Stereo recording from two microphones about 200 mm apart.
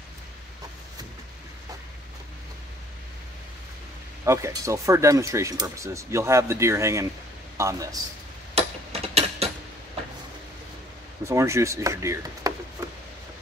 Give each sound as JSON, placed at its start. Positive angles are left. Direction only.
{"t": 4.2, "sound": "speech", "side_deg": -15}
{"t": 8.5, "sound": "a sound", "side_deg": -30}
{"t": 11.2, "sound": "speech", "side_deg": -15}